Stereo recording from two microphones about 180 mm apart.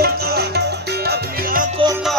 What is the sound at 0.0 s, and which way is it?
Music, 60° right (ahead or behind).